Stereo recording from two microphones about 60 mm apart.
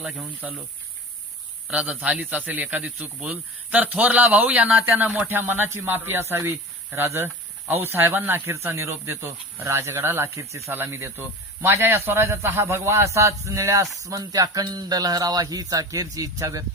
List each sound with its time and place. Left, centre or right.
0.4 s a man's voice: right
1.7 s a man's voice: centre
5.3 s speech: right
8.5 s a man's voice: right
10.7 s a man's voice: right
13.1 s a sound: right
14.0 s speech: right